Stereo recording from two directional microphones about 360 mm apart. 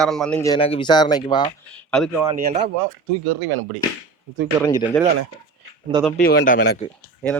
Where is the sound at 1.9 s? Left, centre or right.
Centre.